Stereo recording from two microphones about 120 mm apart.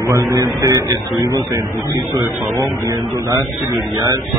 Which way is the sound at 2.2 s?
25° right (ahead or behind).